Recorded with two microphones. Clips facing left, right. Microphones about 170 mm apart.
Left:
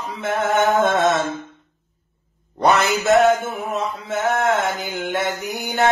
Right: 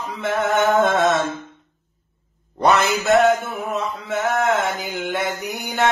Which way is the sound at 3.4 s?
40° left (ahead or behind).